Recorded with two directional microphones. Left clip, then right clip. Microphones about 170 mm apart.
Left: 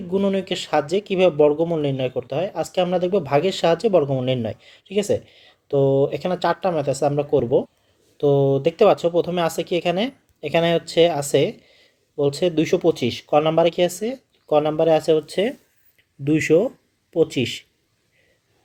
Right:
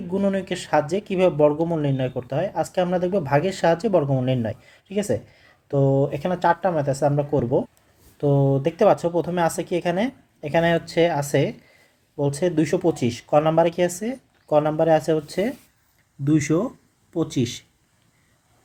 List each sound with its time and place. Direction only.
0.1 s speech: 15° left (ahead or behind)
10.7 s speech: 35° left (ahead or behind)
12.5 s speech: 20° left (ahead or behind)
16.2 s speech: 20° left (ahead or behind)